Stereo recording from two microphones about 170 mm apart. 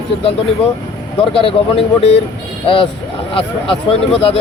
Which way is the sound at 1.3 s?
35° left (ahead or behind).